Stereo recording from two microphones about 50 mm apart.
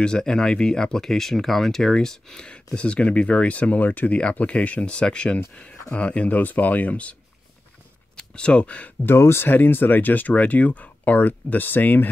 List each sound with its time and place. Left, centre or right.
0.0 s speech: centre
8.2 s speech: left
9.0 s speech: left
9.5 s speech: left